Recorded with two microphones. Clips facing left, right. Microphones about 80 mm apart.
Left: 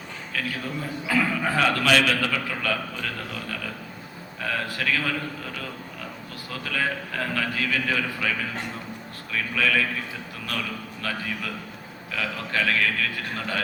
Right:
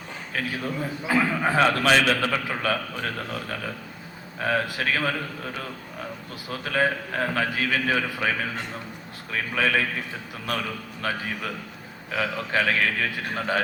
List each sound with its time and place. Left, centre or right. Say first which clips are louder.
0.3 s a man's voice: right 2 dB; right
4.4 s a man's voice: right 4 dB; right
6.5 s a man's voice: right 4 dB; right
12.1 s a man's voice: right 3 dB; right